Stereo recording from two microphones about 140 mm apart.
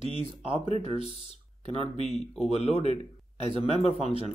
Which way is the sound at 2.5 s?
50° left (ahead or behind).